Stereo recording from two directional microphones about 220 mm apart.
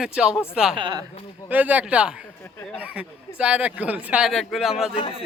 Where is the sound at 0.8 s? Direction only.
20° right (ahead or behind).